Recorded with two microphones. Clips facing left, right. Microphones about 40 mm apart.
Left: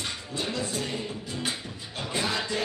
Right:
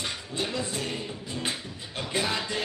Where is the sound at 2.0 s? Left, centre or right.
Right.